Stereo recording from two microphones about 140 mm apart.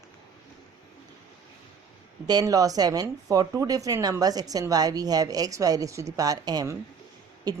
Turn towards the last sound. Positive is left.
turn(degrees=-25)  # may be behind; listen again after turning